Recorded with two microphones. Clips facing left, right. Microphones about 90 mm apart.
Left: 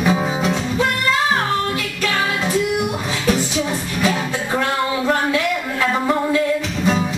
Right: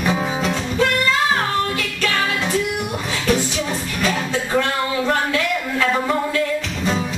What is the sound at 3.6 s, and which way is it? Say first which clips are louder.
Music: left 2 dB; 10° left (ahead or behind).